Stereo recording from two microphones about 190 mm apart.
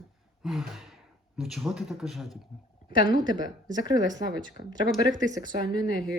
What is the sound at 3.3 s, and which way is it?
Speech, 25° right (ahead or behind).